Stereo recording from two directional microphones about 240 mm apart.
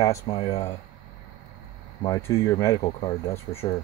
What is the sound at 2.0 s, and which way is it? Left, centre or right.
Speech, centre.